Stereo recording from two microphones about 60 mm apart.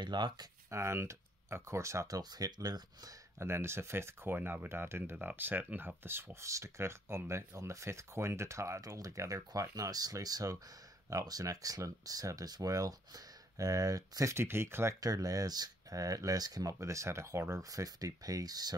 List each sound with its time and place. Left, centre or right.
0.7 s speech: right
2.0 s speech: right
3.3 s speech: right
6.4 s speech: right
14.3 s speech: right
15.0 s speech: right